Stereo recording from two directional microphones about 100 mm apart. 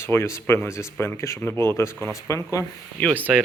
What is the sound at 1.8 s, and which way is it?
Speech, 25° left (ahead or behind).